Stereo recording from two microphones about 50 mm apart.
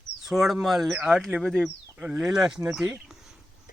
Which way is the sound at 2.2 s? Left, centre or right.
Centre.